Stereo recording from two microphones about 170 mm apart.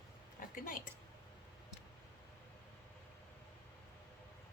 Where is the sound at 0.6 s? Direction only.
50° left (ahead or behind).